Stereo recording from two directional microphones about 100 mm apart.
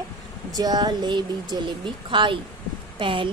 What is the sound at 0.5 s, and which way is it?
A woman's voice, 40° right (ahead or behind).